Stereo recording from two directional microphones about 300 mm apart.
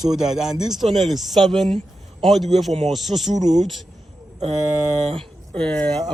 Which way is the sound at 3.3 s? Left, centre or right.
Right.